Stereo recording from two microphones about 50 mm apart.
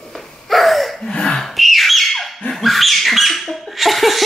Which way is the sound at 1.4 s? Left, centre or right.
Centre.